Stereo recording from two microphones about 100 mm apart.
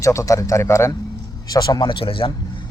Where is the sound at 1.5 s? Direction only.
40° left (ahead or behind); by 2.3 s 60° left (ahead or behind).